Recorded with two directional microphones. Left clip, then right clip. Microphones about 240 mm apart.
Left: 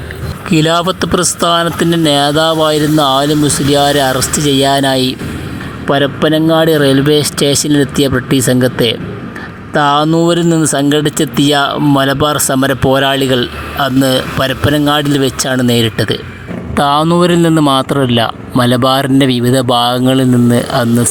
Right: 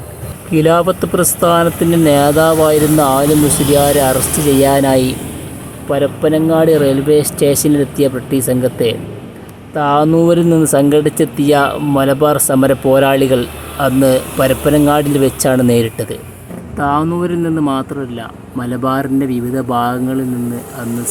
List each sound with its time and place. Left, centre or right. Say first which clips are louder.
0.5 s speech: right 1 dB; left